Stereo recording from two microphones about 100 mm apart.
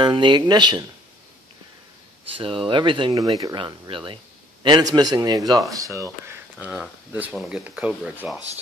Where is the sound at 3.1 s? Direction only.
35° right (ahead or behind).